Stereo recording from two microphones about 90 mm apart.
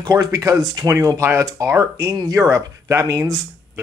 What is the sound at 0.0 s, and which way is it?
Speech, 45° right (ahead or behind).